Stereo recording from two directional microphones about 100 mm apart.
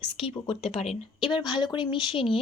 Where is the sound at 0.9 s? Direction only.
55° left (ahead or behind).